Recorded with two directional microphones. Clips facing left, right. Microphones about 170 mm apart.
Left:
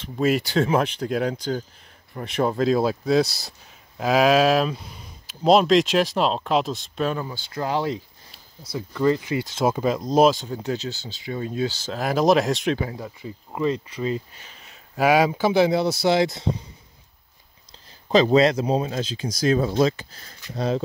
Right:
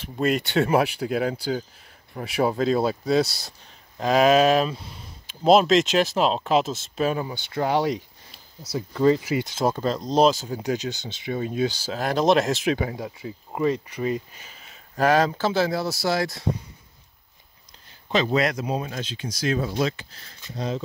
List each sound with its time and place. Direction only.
0.0 s speech: centre (ahead or behind); by 9.2 s 15° right (ahead or behind)
9.6 s speech: 10° left (ahead or behind)
10.4 s speech: 10° right (ahead or behind)
11.9 s speech: centre (ahead or behind)
14.6 s speech: 5° left (ahead or behind); by 16.4 s 20° left (ahead or behind)
18.0 s speech: 35° left (ahead or behind)
19.0 s speech: 35° left (ahead or behind)
20.5 s speech: 60° left (ahead or behind)